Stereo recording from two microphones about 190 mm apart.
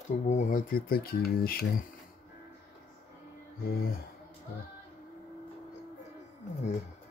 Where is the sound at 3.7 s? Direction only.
55° left (ahead or behind).